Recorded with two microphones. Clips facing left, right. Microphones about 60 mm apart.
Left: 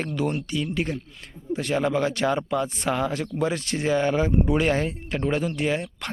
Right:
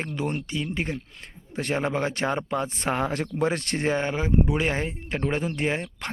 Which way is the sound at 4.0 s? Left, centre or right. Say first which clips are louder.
Left 2 dB; centre.